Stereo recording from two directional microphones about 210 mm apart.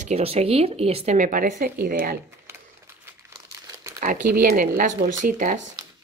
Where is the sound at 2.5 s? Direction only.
10° right (ahead or behind).